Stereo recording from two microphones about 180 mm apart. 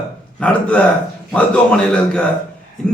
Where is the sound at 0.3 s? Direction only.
5° left (ahead or behind).